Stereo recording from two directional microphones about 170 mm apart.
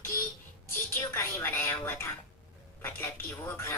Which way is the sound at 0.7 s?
15° left (ahead or behind).